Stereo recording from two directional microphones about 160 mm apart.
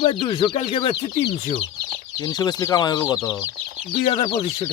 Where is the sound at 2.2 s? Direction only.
20° left (ahead or behind).